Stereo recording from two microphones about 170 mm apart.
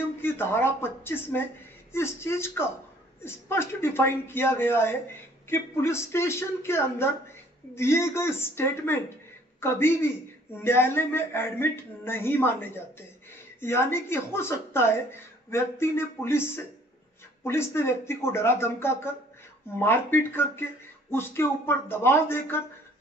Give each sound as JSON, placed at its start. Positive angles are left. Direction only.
{"t": 0.2, "sound": "a man's voice", "side_deg": 15}